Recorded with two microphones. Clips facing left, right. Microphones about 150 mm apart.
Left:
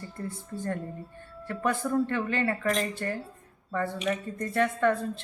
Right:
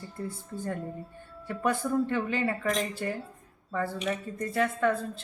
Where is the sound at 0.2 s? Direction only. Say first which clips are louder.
Even; 5° right (ahead or behind).